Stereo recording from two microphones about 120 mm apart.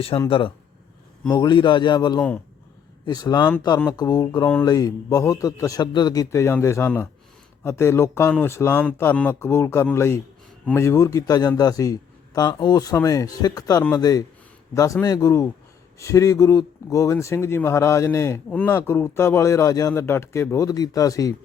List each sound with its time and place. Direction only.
0.3 s speech: 45° left (ahead or behind)
1.3 s a man's voice: 35° left (ahead or behind)